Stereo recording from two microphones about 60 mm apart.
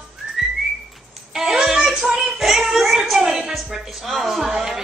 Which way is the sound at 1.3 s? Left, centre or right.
Centre.